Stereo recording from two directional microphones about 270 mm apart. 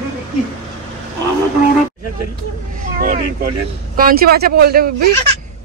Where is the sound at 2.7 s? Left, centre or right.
Right.